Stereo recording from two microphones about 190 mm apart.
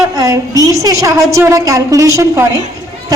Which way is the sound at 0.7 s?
15° right (ahead or behind).